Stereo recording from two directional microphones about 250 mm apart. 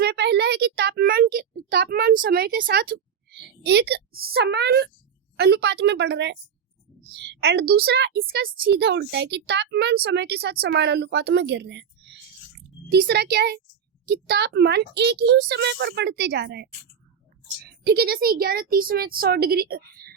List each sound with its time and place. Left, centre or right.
0.0 s a sound: right
3.2 s a woman's voice: right
17.8 s a woman's voice: right